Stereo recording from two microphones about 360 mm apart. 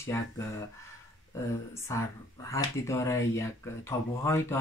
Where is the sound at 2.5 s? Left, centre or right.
Centre.